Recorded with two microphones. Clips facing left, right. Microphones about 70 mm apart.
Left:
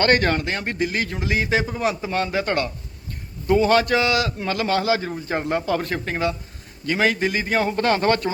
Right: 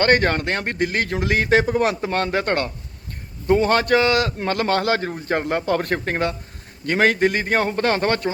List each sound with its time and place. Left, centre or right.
0.0 s a man's voice: right